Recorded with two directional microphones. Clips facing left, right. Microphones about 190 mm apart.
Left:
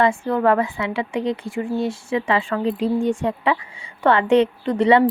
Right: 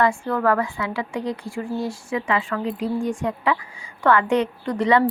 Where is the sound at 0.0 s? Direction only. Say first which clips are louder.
Left 2 dB; 20° left (ahead or behind).